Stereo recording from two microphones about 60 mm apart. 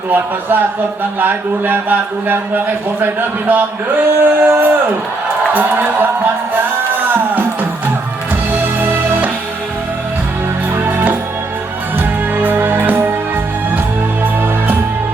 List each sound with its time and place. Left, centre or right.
0.1 s speech: right
6.9 s music: right
8.8 s music: right
10.8 s music: right
12.4 s music: right